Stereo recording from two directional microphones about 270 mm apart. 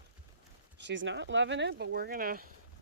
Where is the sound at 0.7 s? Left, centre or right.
Right.